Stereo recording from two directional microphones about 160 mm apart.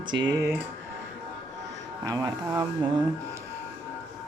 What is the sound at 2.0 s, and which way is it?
Speech, 20° right (ahead or behind).